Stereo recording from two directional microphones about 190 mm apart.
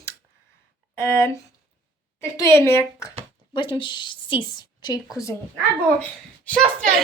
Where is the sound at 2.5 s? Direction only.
15° left (ahead or behind).